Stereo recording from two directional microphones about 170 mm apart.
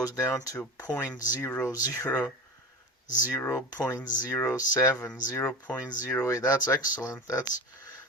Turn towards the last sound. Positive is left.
turn(degrees=20)  # may be behind; listen again after turning